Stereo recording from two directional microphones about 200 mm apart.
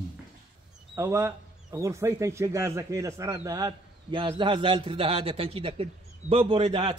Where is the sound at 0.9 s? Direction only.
15° right (ahead or behind).